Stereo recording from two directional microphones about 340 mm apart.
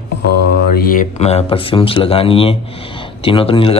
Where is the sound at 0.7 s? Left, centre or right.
Left.